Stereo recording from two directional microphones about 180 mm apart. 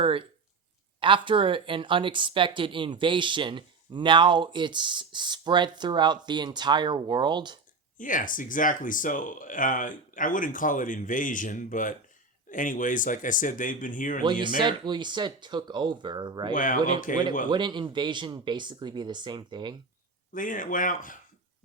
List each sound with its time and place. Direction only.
0.0 s speech: 30° right (ahead or behind)
7.9 s speech: 45° left (ahead or behind)
14.4 s speech: 25° right (ahead or behind)
16.5 s speech: 45° left (ahead or behind)
17.5 s speech: 25° right (ahead or behind)
20.3 s speech: 50° left (ahead or behind)